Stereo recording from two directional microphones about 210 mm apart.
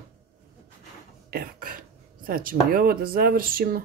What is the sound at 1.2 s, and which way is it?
Cough, 45° right (ahead or behind).